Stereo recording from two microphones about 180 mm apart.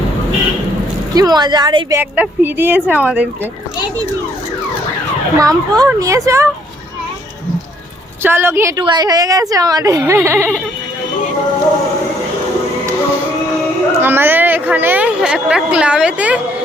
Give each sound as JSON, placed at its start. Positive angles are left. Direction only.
{"t": 1.1, "sound": "speech", "side_deg": -20}
{"t": 5.4, "sound": "speech", "side_deg": -20}
{"t": 8.2, "sound": "speech", "side_deg": -10}
{"t": 14.0, "sound": "a woman's voice", "side_deg": -10}